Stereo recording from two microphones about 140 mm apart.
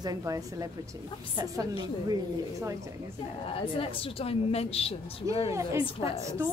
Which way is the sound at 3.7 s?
40° left (ahead or behind).